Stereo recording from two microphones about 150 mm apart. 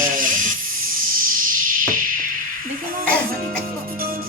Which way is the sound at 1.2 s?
65° right (ahead or behind).